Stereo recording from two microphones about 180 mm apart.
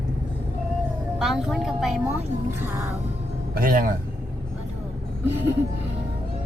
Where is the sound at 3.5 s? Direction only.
50° right (ahead or behind).